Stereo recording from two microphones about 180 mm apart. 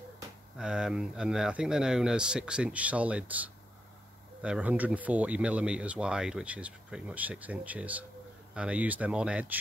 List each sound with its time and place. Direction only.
0.6 s speech: 5° right (ahead or behind)